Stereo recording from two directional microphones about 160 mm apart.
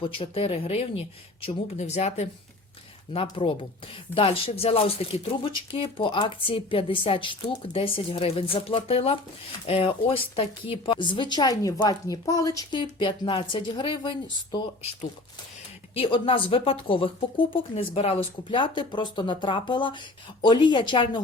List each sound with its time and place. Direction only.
0.0 s a woman's voice: 35° left (ahead or behind)
16.0 s speech: 30° left (ahead or behind)